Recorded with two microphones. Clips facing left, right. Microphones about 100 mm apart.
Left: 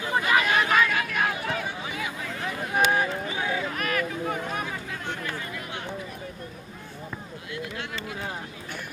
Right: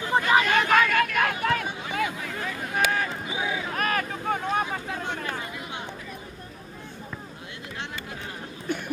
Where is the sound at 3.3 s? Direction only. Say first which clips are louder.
Left 1 dB; 15° right (ahead or behind).